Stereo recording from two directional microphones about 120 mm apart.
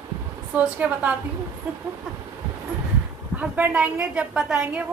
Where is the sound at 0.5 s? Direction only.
10° right (ahead or behind).